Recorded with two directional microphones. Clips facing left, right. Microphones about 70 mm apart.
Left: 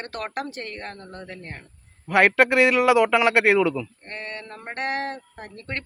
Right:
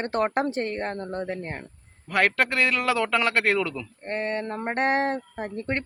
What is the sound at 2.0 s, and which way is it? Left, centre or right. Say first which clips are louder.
A man's voice: left 5 dB; centre.